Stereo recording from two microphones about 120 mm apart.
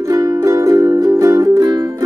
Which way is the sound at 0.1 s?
30° right (ahead or behind).